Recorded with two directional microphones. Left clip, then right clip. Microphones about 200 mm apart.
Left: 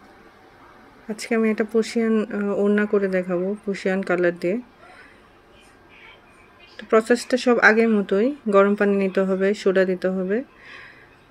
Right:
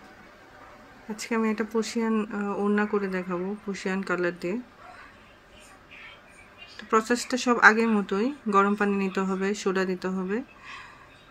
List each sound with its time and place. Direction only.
1.1 s speech: 15° left (ahead or behind)
6.8 s speech: 15° left (ahead or behind)
10.2 s a sound: 10° left (ahead or behind)